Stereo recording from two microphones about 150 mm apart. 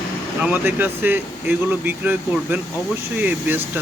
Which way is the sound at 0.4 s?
15° right (ahead or behind).